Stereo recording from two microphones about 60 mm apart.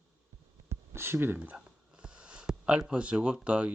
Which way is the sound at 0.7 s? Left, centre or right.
Right.